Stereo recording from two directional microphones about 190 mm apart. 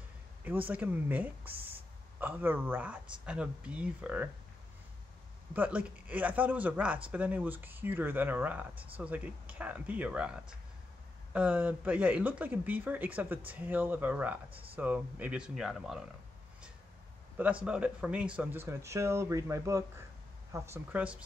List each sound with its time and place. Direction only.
0.7 s speech: 10° right (ahead or behind)
5.5 s speech: 5° right (ahead or behind)
14.5 s speech: 30° right (ahead or behind)
14.8 s speech: 10° right (ahead or behind)
17.6 s speech: 5° right (ahead or behind)